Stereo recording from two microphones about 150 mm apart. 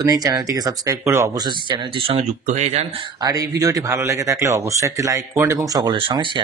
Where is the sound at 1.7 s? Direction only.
35° right (ahead or behind).